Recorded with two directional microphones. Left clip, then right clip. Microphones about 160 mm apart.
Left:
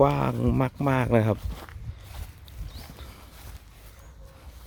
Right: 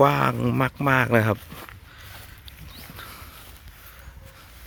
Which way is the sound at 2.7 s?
Centre (ahead or behind).